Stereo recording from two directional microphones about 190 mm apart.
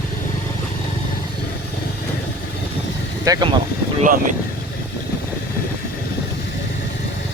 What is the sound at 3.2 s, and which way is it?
Speech, 20° right (ahead or behind).